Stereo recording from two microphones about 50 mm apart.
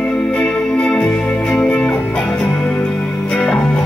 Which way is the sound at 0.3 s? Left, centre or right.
Left.